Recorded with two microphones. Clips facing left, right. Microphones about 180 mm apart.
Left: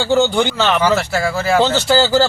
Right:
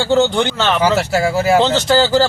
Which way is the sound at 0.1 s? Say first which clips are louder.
Right 1 dB; 20° right (ahead or behind).